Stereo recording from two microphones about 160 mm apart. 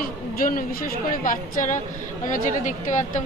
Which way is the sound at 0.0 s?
65° left (ahead or behind).